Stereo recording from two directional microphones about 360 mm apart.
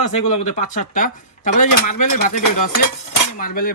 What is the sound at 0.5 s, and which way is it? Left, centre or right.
Speech, left.